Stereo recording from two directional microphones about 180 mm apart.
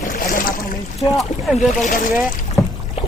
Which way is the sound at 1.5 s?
45° left (ahead or behind).